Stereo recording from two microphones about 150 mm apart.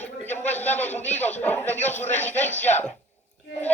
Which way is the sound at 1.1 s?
50° left (ahead or behind).